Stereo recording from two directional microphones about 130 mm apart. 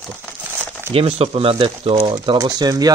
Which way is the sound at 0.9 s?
50° right (ahead or behind).